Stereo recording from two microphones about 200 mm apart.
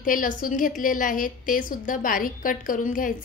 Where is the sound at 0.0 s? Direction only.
45° left (ahead or behind).